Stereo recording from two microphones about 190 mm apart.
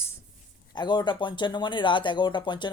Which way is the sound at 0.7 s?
25° left (ahead or behind).